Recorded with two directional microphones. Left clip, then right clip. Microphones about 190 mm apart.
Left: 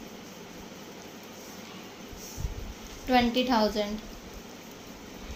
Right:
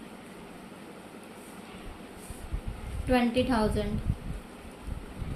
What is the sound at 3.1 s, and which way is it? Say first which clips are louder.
Speech: left 2 dB; 25° left (ahead or behind).